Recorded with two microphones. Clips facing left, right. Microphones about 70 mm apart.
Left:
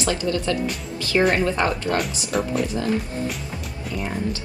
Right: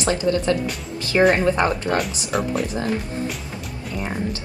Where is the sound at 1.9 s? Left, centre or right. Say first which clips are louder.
Right 1 dB; centre.